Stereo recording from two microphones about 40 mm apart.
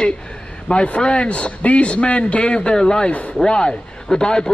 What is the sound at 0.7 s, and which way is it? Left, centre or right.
A man's voice, left.